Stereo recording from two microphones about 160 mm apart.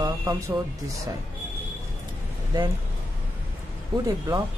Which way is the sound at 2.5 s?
25° right (ahead or behind).